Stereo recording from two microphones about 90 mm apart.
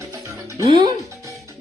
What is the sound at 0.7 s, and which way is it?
Speech, 55° right (ahead or behind).